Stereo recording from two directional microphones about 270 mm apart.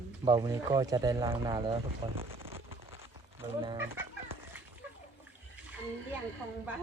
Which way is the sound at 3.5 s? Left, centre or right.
Centre.